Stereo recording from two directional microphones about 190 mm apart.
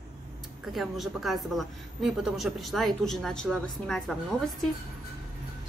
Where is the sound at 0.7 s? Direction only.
Centre (ahead or behind).